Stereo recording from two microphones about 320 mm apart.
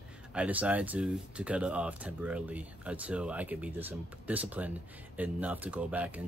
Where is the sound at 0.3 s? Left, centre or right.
Centre.